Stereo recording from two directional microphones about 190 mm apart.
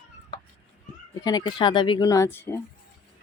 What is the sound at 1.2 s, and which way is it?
Speech, 20° left (ahead or behind).